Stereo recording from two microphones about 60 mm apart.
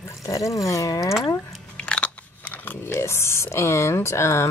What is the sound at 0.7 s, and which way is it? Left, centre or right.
Speech, left.